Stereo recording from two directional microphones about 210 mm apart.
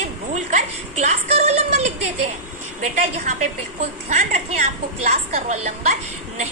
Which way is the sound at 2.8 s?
35° right (ahead or behind).